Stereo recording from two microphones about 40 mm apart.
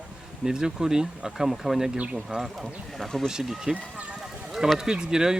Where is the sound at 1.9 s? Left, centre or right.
Right.